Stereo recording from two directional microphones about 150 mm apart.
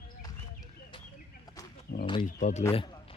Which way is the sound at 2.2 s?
55° left (ahead or behind).